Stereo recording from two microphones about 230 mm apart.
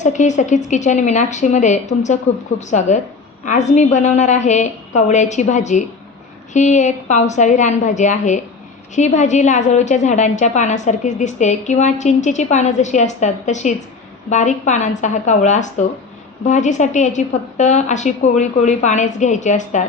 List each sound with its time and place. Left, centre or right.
0.0 s a woman's voice: left